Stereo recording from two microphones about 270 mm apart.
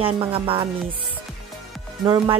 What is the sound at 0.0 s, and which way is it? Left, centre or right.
Speech, centre.